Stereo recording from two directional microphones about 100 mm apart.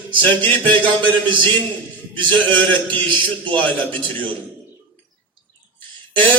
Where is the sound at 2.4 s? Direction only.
15° left (ahead or behind).